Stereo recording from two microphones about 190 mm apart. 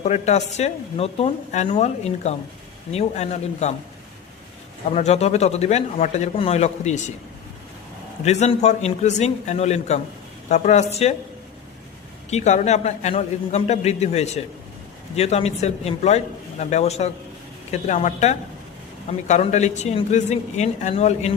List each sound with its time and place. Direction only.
0.0 s speech: 35° left (ahead or behind)
4.9 s speech: 35° left (ahead or behind)
8.2 s speech: 35° left (ahead or behind)
12.3 s speech: 35° left (ahead or behind)